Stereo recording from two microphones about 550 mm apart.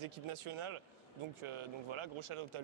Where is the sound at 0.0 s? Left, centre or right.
Right.